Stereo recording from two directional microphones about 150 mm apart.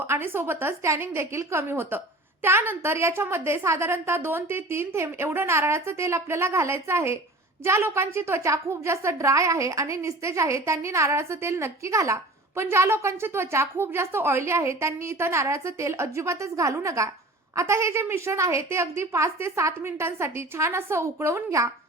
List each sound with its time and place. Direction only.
0.0 s a woman's voice: 15° right (ahead or behind)